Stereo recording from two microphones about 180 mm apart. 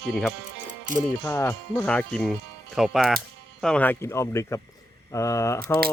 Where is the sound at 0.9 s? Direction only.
45° right (ahead or behind).